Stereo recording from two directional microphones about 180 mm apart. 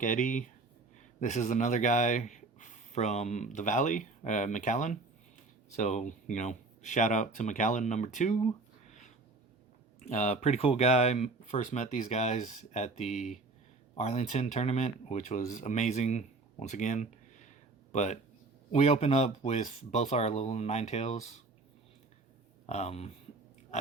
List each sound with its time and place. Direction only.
0.0 s speech: 45° left (ahead or behind)
8.9 s a sound: 40° left (ahead or behind)
10.0 s speech: 40° left (ahead or behind)
22.6 s speech: 40° left (ahead or behind)